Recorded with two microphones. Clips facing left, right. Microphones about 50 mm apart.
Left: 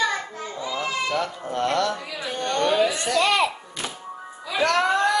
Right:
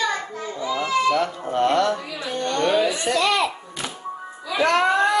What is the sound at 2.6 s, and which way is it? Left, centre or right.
Speech, right.